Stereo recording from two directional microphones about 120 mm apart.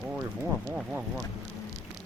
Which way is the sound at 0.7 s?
5° right (ahead or behind).